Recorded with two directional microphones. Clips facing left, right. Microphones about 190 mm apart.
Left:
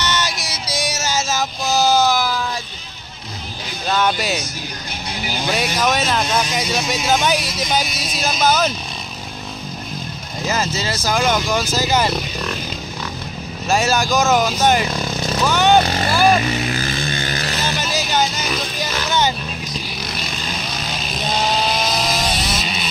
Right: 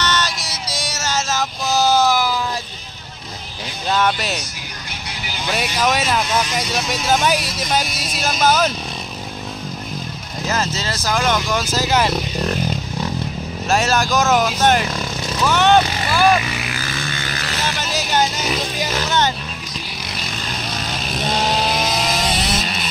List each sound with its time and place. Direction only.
0.0 s music: 10° left (ahead or behind)
4.0 s speech: 5° left (ahead or behind)
5.5 s speech: 5° right (ahead or behind)
10.4 s speech: 10° left (ahead or behind)
13.7 s speech: centre (ahead or behind)
16.0 s speech: 35° left (ahead or behind)
17.2 s vehicle: 35° left (ahead or behind)
21.7 s vehicle: centre (ahead or behind)